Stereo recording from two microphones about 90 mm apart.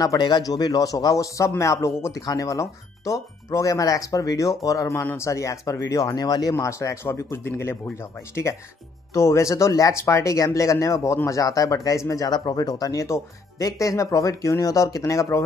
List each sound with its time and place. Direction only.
0.0 s speech: 50° left (ahead or behind)
6.5 s speech: 35° left (ahead or behind)